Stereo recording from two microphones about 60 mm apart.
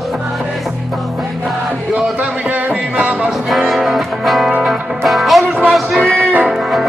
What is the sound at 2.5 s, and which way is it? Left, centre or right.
Music, right.